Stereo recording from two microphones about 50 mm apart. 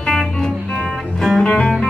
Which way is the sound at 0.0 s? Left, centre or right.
Centre.